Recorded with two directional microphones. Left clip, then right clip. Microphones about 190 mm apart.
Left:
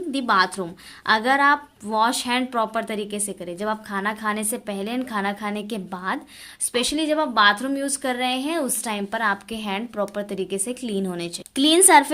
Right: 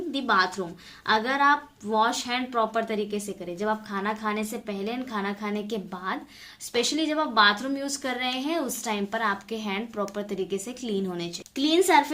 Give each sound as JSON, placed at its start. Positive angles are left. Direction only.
{"t": 0.1, "sound": "a woman's voice", "side_deg": 40}